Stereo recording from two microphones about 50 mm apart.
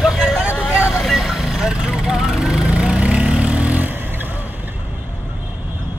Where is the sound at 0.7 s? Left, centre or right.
Left.